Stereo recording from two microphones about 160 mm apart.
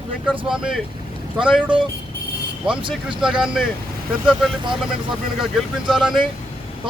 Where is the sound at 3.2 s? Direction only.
5° right (ahead or behind).